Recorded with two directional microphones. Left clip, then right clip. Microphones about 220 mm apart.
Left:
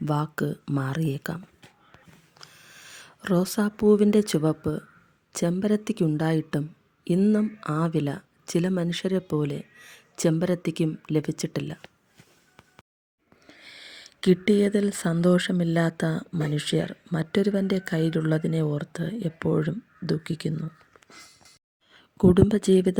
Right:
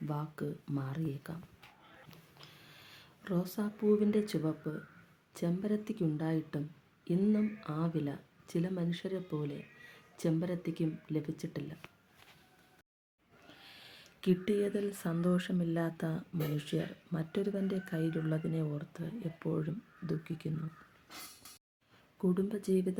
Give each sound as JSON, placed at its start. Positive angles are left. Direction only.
{"t": 0.0, "sound": "speech", "side_deg": 40}
{"t": 2.4, "sound": "speech", "side_deg": 30}
{"t": 13.6, "sound": "speech", "side_deg": 35}
{"t": 22.2, "sound": "speech", "side_deg": 40}